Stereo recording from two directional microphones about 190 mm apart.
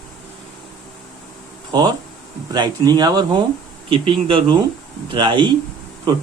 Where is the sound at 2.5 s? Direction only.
20° right (ahead or behind).